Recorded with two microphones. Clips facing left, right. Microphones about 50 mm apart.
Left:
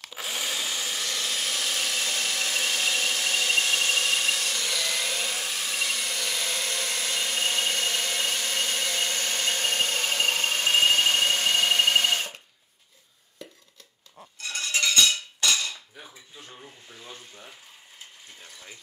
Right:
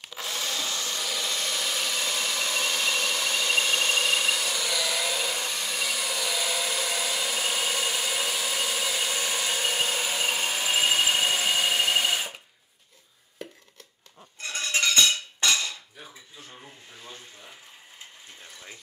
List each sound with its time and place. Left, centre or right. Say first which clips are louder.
0.1 s wood: even; centre
1.0 s engine: even; centre
14.4 s a sound: right 1 dB; right
15.4 s cutlery: right 1 dB; right
18.4 s water: right 1 dB; centre